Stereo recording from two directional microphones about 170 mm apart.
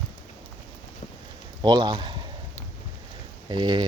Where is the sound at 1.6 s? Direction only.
25° right (ahead or behind).